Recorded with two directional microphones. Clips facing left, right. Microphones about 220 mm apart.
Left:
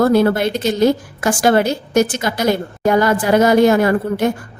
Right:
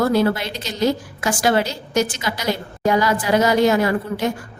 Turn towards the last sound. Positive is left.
turn(degrees=55)  # may be behind; listen again after turning